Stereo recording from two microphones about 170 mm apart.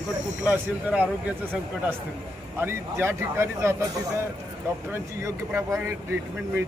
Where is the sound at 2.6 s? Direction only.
15° right (ahead or behind).